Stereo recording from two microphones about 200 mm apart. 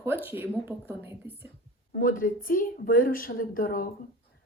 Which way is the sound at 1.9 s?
45° left (ahead or behind).